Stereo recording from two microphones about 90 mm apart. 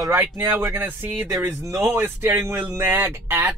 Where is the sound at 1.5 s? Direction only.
35° right (ahead or behind).